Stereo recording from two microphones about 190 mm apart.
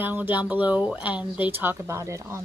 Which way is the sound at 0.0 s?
10° right (ahead or behind).